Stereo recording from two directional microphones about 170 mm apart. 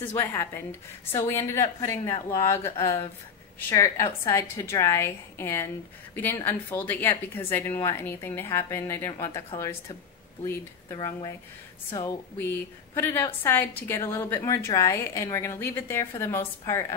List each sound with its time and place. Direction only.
0.1 s a woman's voice: 15° left (ahead or behind)
10.4 s a woman's voice: 15° left (ahead or behind)